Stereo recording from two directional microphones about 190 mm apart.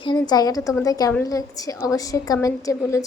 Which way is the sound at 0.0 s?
25° left (ahead or behind).